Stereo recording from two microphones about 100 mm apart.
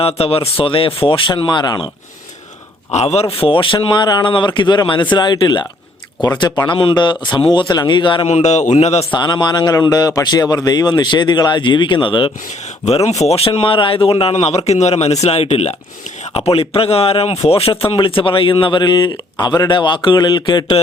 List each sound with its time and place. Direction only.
0.0 s speech: 85° left; by 1.9 s 45° left (ahead or behind)
3.0 s speech: 90° left; by 8.3 s 50° left (ahead or behind)
8.8 s a man's voice: 90° left
9.1 s speech: 45° left (ahead or behind)
13.1 s a man's voice: 90° left; by 20.7 s 45° left (ahead or behind)